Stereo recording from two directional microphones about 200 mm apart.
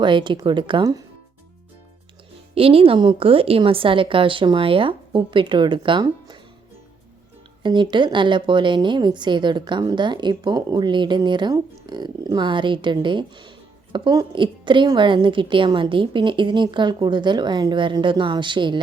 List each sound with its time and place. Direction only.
0.0 s a woman's voice: 25° right (ahead or behind)
2.6 s a woman's voice: 30° right (ahead or behind)
7.6 s a woman's voice: 25° right (ahead or behind)